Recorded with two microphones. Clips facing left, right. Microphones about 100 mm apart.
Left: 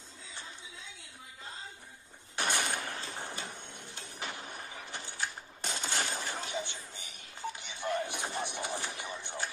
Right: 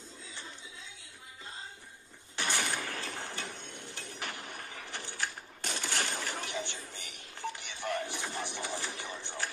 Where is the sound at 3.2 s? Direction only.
20° left (ahead or behind).